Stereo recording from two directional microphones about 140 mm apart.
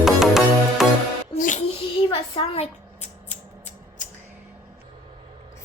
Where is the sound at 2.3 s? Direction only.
45° left (ahead or behind).